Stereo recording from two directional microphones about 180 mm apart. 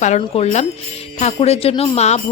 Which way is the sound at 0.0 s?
40° left (ahead or behind).